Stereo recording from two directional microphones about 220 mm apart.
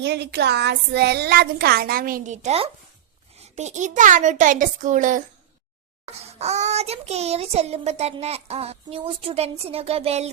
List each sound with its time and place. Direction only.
0.0 s a child's voice: 50° right (ahead or behind)
6.4 s child singing: 30° right (ahead or behind)